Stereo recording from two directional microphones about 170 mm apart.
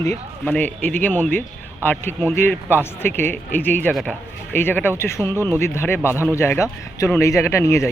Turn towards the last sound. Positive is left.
turn(degrees=15)  # may be behind; listen again after turning